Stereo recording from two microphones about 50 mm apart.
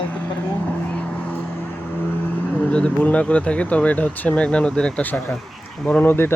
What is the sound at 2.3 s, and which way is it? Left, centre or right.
Speech, left.